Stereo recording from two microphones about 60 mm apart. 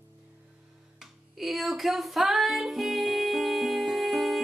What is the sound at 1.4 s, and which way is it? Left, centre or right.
Music, centre.